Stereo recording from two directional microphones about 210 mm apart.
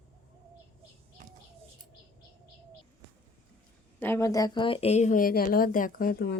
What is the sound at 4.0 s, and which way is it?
Speech, 10° left (ahead or behind).